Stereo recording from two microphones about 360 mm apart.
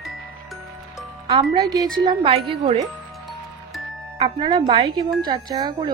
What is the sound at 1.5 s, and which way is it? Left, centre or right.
Speech, centre.